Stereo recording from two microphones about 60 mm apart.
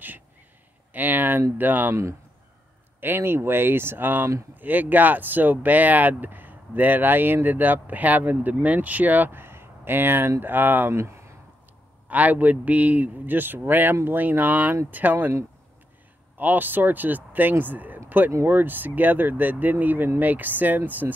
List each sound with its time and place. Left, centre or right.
0.9 s a sound: right
1.6 s speech: right
3.0 s speech: right
10.9 s speech: right
12.1 s speech: right
16.3 s speech: right